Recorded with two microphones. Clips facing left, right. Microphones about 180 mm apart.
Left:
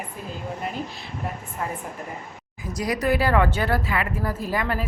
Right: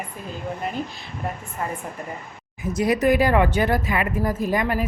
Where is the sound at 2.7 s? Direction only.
25° right (ahead or behind).